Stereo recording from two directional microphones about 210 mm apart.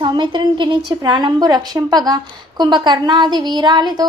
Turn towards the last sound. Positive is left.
turn(degrees=-20)  # may be behind; listen again after turning